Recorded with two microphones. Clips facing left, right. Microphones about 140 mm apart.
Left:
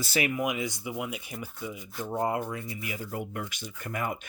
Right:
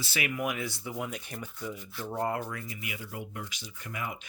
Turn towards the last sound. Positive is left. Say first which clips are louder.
# left 5 dB
turn(degrees=50)  # may be behind; listen again after turning